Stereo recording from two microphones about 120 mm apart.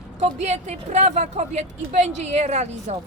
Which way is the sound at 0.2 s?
70° right (ahead or behind).